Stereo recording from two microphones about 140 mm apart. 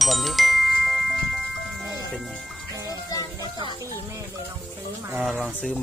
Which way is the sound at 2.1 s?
Centre (ahead or behind).